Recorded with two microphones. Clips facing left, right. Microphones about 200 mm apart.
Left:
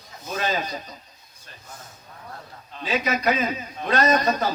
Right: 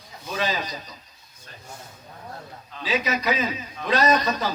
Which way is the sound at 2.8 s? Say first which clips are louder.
Left 2 dB; 50° left (ahead or behind).